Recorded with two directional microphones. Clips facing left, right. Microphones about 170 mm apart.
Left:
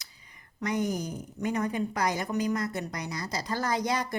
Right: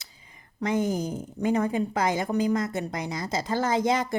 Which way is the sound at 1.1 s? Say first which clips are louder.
Right 5 dB; 25° right (ahead or behind).